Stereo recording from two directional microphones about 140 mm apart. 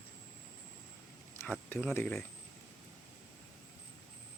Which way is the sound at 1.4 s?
15° left (ahead or behind).